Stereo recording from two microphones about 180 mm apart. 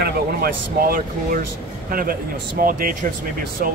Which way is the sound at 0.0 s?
55° right (ahead or behind).